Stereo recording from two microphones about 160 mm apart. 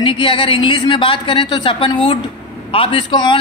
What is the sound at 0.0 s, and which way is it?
A man's voice, 30° left (ahead or behind).